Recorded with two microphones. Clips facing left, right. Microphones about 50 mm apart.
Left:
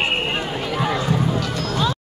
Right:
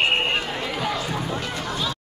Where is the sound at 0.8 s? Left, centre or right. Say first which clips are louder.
Left 5 dB; left.